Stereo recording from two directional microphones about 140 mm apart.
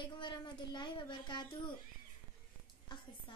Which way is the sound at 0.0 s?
35° left (ahead or behind).